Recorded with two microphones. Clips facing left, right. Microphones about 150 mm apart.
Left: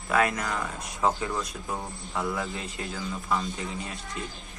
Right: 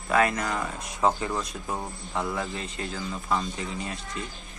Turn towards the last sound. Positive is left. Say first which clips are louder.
# right 1 dB
turn(degrees=0)  # may be behind; listen again after turning